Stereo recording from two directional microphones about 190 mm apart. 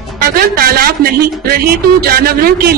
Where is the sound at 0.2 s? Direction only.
50° right (ahead or behind).